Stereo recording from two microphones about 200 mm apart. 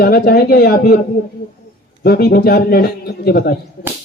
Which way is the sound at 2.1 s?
50° left (ahead or behind).